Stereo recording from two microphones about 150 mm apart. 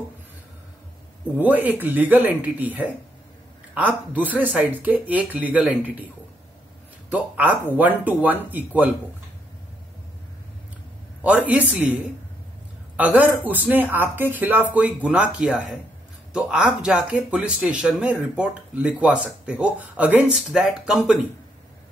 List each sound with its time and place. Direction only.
1.4 s speech: 10° right (ahead or behind)
7.1 s speech: 10° right (ahead or behind)
11.2 s speech: 10° right (ahead or behind)